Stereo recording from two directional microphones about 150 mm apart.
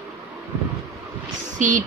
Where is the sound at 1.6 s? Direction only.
55° right (ahead or behind).